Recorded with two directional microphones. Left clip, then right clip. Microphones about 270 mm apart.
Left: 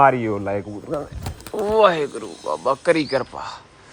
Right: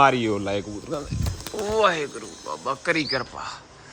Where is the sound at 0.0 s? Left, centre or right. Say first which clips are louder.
Left 3 dB; centre.